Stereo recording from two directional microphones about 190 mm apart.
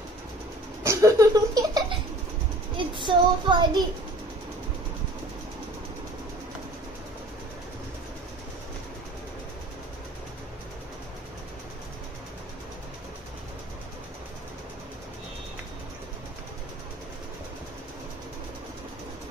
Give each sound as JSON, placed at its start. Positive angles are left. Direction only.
{"t": 0.8, "sound": "laughter", "side_deg": -15}
{"t": 2.9, "sound": "child singing", "side_deg": -25}